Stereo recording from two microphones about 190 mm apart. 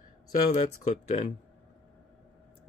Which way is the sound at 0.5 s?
35° left (ahead or behind).